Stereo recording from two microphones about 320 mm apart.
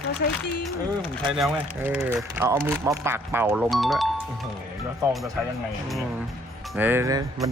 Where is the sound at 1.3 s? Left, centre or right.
Centre.